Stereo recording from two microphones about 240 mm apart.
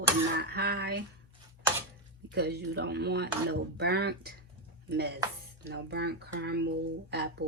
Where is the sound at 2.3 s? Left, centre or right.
Right.